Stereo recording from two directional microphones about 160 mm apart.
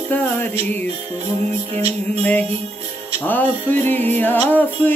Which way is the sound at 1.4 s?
45° right (ahead or behind).